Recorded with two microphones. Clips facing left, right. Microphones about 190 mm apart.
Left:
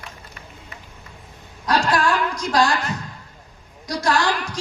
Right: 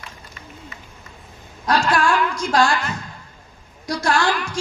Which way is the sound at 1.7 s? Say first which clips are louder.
Right 1 dB; 35° left (ahead or behind).